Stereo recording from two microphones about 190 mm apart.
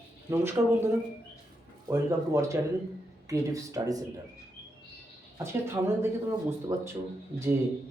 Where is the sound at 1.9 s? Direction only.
15° right (ahead or behind).